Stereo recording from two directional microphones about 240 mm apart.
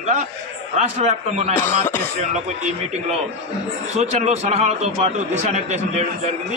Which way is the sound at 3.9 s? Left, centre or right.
Right.